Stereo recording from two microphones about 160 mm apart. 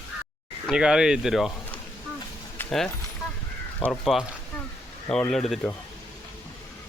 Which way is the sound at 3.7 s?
10° left (ahead or behind).